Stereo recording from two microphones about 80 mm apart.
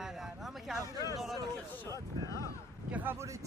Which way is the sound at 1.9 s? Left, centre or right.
Left.